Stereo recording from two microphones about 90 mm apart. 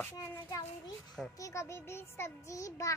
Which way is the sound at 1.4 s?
35° left (ahead or behind).